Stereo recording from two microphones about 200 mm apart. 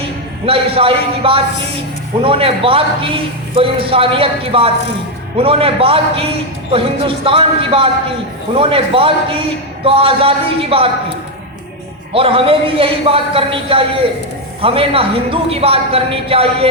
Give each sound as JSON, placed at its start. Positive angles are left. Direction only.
{"t": 0.4, "sound": "a man's voice", "side_deg": -30}
{"t": 12.1, "sound": "a man's voice", "side_deg": -25}